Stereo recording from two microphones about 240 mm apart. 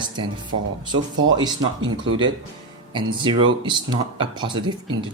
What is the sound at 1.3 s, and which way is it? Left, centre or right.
Speech, centre.